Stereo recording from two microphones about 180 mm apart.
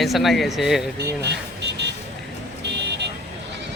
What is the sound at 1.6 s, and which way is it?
Vehicle, 75° right (ahead or behind).